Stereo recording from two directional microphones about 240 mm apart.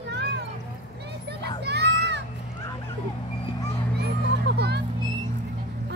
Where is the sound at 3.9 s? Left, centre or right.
Right.